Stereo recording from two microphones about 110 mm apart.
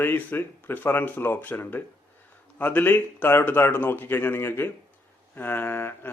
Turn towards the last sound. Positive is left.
turn(degrees=20)  # may be behind; listen again after turning